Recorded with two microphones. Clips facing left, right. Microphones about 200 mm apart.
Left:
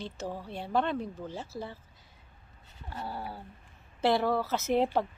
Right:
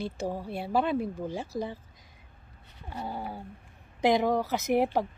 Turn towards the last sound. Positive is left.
turn(degrees=-10)  # may be behind; listen again after turning